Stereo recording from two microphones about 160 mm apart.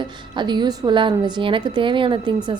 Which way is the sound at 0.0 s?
30° right (ahead or behind).